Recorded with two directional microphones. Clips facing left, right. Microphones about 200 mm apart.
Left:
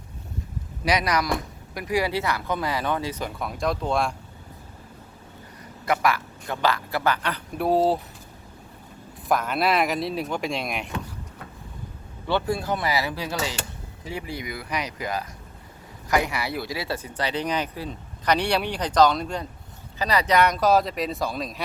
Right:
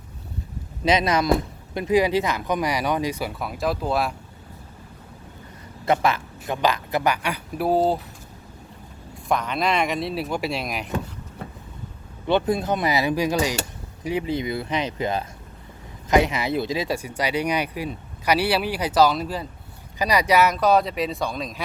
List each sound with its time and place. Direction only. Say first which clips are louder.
0.9 s speech: right 4 dB; 25° right (ahead or behind); by 4.1 s 5° right (ahead or behind)
5.8 s speech: right 2 dB; 25° right (ahead or behind); by 7.9 s centre (ahead or behind)
9.3 s speech: even; 5° left (ahead or behind)
12.3 s speech: right 4 dB; 20° right (ahead or behind); by 21.6 s centre (ahead or behind)